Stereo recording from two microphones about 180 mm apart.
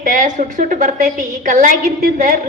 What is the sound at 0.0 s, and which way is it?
A woman's voice, 45° right (ahead or behind).